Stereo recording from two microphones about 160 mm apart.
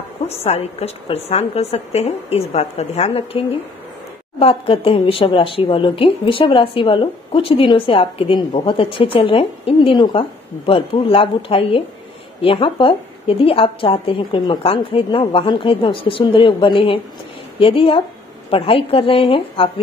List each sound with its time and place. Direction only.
0.3 s a woman's voice: 40° left (ahead or behind)